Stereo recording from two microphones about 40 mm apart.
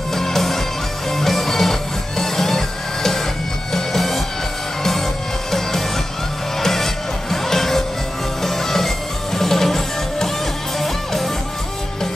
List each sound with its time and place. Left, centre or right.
0.1 s music: centre
6.6 s music: centre